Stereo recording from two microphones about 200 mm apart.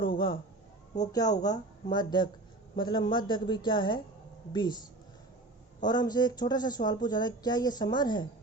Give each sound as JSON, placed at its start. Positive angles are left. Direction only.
{"t": 0.0, "sound": "a sound", "side_deg": 25}
{"t": 0.9, "sound": "speech", "side_deg": 20}
{"t": 5.8, "sound": "speech", "side_deg": 20}